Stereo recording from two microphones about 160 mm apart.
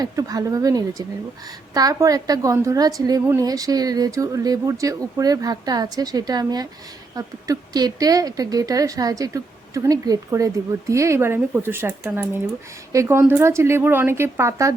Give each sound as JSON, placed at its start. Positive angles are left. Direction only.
{"t": 0.0, "sound": "a woman's voice", "side_deg": -25}